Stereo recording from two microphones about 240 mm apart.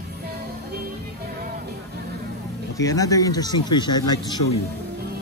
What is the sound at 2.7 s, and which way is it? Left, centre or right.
Speech, centre.